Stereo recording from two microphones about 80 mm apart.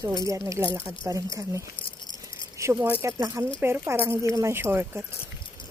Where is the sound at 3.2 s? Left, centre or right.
Right.